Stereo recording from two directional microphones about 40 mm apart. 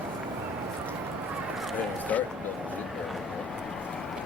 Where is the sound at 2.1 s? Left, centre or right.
Left.